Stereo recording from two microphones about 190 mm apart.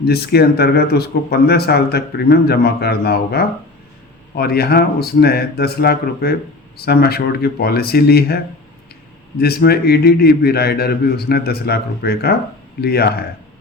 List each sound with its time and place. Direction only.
0.0 s speech: 55° left (ahead or behind)
9.4 s speech: 55° left (ahead or behind)